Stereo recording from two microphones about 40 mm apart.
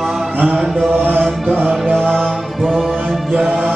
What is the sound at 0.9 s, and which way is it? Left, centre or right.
Music, right.